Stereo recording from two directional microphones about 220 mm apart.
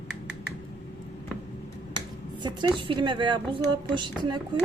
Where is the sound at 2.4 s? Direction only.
20° right (ahead or behind).